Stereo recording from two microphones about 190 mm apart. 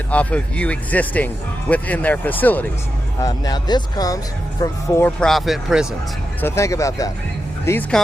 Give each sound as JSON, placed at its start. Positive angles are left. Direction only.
{"t": 0.1, "sound": "speech", "side_deg": 5}
{"t": 3.2, "sound": "speech", "side_deg": 20}
{"t": 5.2, "sound": "speech", "side_deg": 0}
{"t": 6.4, "sound": "speech", "side_deg": 15}